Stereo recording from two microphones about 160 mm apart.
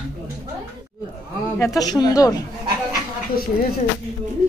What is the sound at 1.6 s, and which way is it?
Speech, 20° left (ahead or behind).